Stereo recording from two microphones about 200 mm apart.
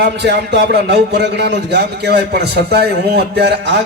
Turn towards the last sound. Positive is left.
turn(degrees=-60)  # may be behind; listen again after turning